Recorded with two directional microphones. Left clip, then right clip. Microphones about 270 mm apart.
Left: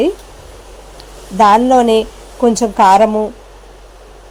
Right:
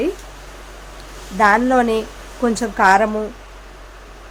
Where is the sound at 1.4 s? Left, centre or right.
Centre.